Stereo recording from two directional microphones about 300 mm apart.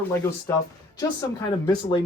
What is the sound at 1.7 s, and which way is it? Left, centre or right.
Speech, centre.